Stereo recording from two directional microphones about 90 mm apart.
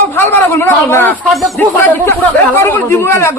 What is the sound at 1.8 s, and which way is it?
A man's voice, 20° left (ahead or behind).